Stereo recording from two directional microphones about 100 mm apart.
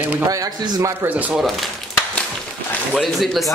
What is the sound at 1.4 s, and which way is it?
Speech, centre (ahead or behind).